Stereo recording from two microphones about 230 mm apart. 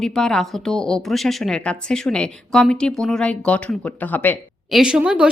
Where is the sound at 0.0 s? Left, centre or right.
Centre.